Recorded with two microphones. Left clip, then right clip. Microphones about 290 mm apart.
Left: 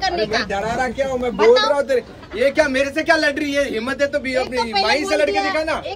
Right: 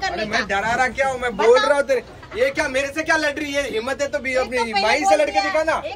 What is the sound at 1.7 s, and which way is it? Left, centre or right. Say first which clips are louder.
Speech: even; right.